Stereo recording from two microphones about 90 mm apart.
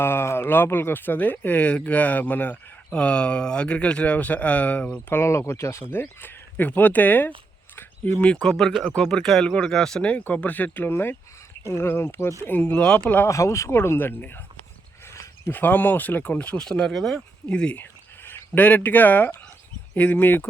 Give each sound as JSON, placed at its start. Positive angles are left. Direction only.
{"t": 0.0, "sound": "speech", "side_deg": 25}
{"t": 5.0, "sound": "speech", "side_deg": 30}
{"t": 7.8, "sound": "a sound", "side_deg": 25}
{"t": 8.3, "sound": "speech", "side_deg": 10}
{"t": 13.2, "sound": "speech", "side_deg": 35}
{"t": 15.0, "sound": "a sound", "side_deg": 30}
{"t": 15.5, "sound": "speech", "side_deg": 20}
{"t": 18.2, "sound": "speech", "side_deg": 25}